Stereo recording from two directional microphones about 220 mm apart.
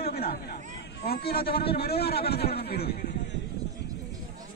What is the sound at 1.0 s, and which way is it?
A man's voice, 45° left (ahead or behind).